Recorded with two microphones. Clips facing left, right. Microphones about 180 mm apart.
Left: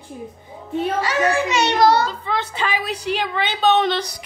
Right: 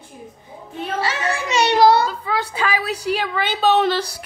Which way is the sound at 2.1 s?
10° right (ahead or behind).